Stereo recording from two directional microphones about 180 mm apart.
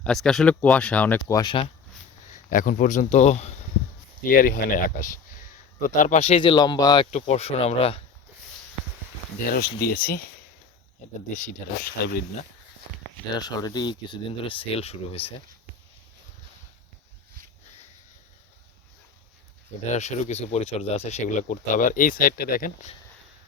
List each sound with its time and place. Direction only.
0.0 s speech: centre (ahead or behind)
1.4 s speech: 30° left (ahead or behind)
2.5 s speech: 45° left (ahead or behind)
4.2 s speech: 50° left (ahead or behind); by 7.1 s 20° left (ahead or behind)
7.1 s speech: 40° left (ahead or behind)
9.5 s speech: 55° left (ahead or behind)
13.3 s speech: 20° left (ahead or behind)
19.9 s speech: 40° left (ahead or behind)